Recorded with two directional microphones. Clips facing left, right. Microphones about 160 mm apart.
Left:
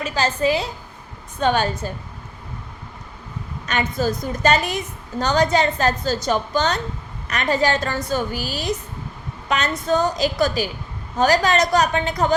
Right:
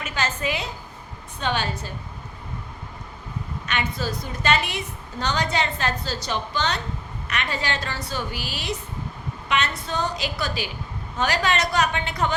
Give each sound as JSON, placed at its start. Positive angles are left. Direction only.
{"t": 0.0, "sound": "a woman's voice", "side_deg": 35}
{"t": 1.4, "sound": "a woman's voice", "side_deg": 45}
{"t": 3.7, "sound": "a woman's voice", "side_deg": 45}